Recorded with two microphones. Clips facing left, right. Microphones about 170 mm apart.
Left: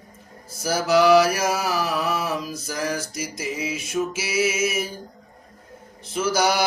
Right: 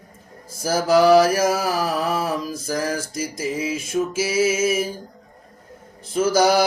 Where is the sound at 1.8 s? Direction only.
40° right (ahead or behind).